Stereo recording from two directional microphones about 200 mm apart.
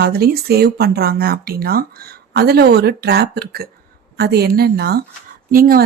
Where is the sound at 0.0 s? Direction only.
50° right (ahead or behind).